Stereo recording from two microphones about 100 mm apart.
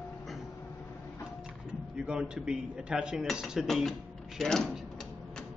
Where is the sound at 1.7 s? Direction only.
10° right (ahead or behind).